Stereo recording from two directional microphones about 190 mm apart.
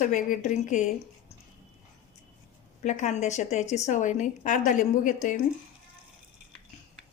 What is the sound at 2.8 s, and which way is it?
A woman's voice, 40° left (ahead or behind).